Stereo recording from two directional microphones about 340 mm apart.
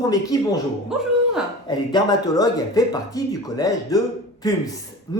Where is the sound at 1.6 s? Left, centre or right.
Centre.